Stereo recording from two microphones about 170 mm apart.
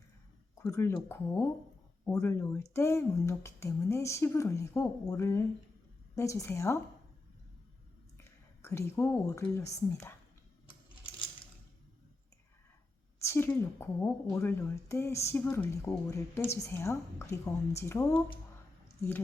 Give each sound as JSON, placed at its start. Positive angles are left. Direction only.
{"t": 0.6, "sound": "a woman's voice", "side_deg": 15}
{"t": 8.2, "sound": "speech", "side_deg": 15}
{"t": 13.1, "sound": "a woman's voice", "side_deg": 15}